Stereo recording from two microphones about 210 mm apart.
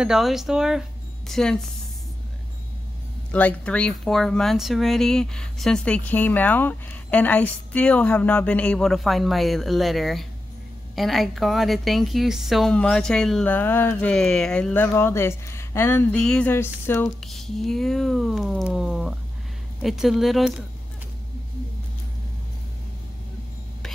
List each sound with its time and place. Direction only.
0.0 s speech: centre (ahead or behind)
3.3 s speech: 5° left (ahead or behind)